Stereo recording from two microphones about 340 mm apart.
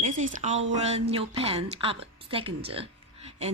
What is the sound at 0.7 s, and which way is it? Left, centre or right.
A woman's voice, centre.